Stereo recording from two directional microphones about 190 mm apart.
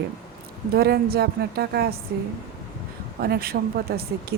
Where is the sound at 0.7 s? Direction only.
55° right (ahead or behind).